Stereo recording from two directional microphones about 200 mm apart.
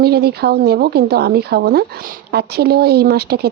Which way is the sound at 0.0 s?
50° right (ahead or behind).